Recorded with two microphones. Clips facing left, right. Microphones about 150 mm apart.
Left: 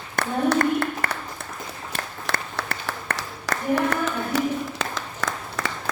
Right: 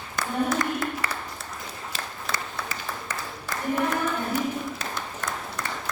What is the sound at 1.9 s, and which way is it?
Applause, 65° left (ahead or behind).